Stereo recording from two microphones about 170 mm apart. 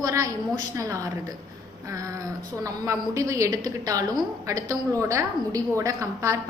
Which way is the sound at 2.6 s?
20° right (ahead or behind).